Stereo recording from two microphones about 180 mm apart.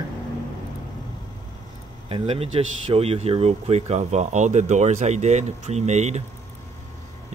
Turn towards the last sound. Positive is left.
turn(degrees=-40)  # may be behind; listen again after turning